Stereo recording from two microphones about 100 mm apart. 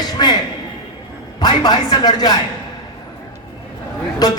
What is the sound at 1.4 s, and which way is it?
Speech, 45° left (ahead or behind).